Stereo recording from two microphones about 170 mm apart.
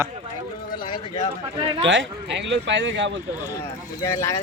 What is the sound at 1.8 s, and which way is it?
Speech, 90° right.